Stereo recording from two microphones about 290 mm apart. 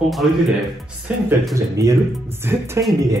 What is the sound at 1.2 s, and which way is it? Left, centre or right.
Speech, centre.